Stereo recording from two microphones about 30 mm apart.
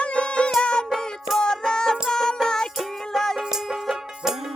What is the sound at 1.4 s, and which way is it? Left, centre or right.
Music, left.